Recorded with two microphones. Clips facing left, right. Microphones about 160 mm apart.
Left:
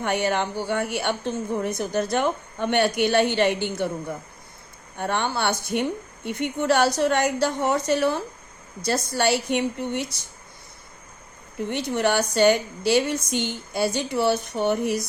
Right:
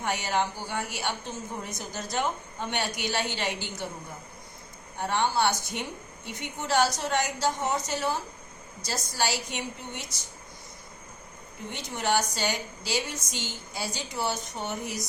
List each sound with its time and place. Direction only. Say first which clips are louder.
0.0 s a woman's voice: left 5 dB; 60° left (ahead or behind)
4.9 s a woman's voice: left 1 dB; 60° left (ahead or behind)
11.7 s a woman's voice: left 5 dB; 65° left (ahead or behind)